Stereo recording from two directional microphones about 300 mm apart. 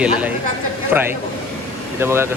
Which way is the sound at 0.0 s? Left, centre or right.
Centre.